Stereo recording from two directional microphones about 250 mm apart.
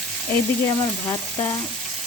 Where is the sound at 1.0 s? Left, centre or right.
Centre.